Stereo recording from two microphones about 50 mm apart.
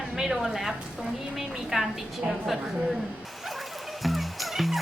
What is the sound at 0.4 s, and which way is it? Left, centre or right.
Speech, centre.